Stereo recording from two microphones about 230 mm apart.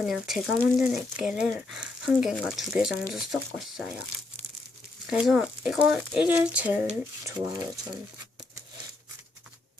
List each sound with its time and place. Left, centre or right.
0.0 s speech: centre
5.0 s speech: centre